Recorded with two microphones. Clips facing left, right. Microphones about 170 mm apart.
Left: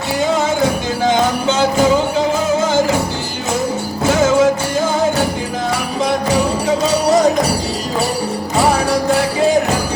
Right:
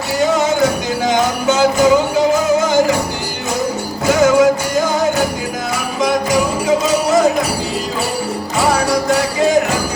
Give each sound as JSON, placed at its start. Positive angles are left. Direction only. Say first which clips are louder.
{"t": 0.6, "sound": "music", "louder": "even", "side_deg": 30}
{"t": 4.1, "sound": "music", "louder": "right 2 dB", "side_deg": 25}
{"t": 6.0, "sound": "music", "louder": "right 1 dB", "side_deg": 35}